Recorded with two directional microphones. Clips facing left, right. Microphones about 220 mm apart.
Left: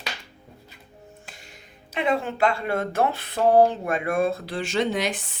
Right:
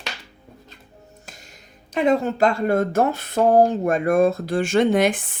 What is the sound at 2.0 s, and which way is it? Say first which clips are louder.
Speech: right 5 dB; 40° right (ahead or behind).